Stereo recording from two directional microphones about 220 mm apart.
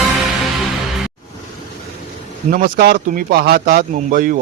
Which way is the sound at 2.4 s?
35° right (ahead or behind).